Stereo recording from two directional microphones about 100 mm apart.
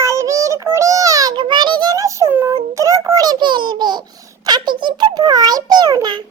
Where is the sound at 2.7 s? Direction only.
30° right (ahead or behind).